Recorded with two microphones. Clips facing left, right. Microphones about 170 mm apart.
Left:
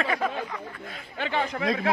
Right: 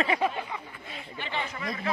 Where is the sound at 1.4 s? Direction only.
65° left (ahead or behind).